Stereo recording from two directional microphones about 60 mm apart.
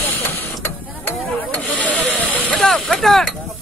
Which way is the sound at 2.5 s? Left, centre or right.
Centre.